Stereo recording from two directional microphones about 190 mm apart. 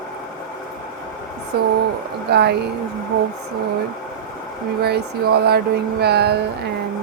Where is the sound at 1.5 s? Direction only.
55° right (ahead or behind).